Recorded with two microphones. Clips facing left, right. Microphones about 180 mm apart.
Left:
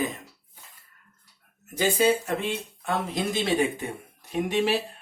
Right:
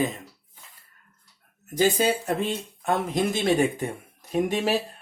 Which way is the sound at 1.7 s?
40° right (ahead or behind).